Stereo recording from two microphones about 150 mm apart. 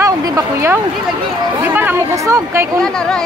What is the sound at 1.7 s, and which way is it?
Chatter, 15° right (ahead or behind).